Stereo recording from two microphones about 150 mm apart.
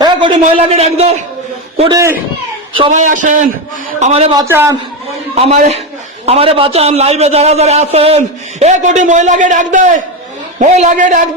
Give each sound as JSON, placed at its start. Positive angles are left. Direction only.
{"t": 0.0, "sound": "a man's voice", "side_deg": -30}
{"t": 1.9, "sound": "speech", "side_deg": -20}
{"t": 2.9, "sound": "a man's voice", "side_deg": -55}
{"t": 4.0, "sound": "a man's voice", "side_deg": -45}
{"t": 4.4, "sound": "a man's voice", "side_deg": -15}
{"t": 5.3, "sound": "a man's voice", "side_deg": -45}